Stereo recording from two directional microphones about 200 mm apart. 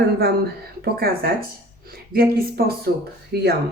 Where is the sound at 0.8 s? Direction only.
50° right (ahead or behind).